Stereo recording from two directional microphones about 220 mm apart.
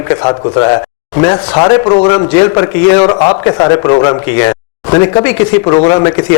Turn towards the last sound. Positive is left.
turn(degrees=20)  # may be behind; listen again after turning